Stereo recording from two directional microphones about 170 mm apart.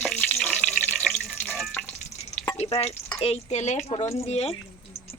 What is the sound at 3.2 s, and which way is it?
Speech, 40° left (ahead or behind).